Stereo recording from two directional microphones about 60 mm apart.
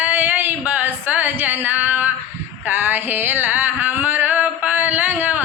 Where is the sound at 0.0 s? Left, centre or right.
Right.